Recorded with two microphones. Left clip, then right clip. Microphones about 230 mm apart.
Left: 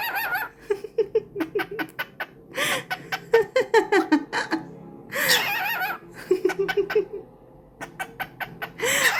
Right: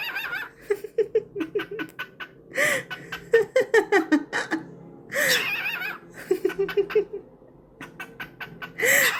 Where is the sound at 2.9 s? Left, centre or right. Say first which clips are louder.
Left 1 dB; left.